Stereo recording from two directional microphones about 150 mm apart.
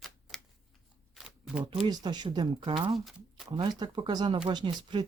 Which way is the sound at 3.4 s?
30° right (ahead or behind).